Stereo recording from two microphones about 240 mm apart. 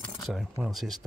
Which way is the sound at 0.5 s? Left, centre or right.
Centre.